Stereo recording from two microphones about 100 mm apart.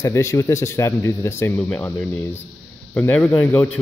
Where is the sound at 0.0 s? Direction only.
30° left (ahead or behind).